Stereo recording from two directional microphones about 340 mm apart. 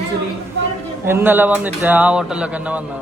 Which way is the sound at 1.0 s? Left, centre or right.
Centre.